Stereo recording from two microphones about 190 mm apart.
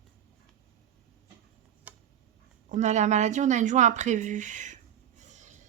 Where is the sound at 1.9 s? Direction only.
5° right (ahead or behind).